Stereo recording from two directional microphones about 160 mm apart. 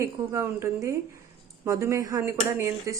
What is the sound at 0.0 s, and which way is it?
A woman's voice, 15° right (ahead or behind).